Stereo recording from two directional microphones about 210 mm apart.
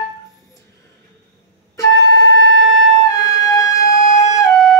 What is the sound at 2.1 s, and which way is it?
Music, 55° right (ahead or behind).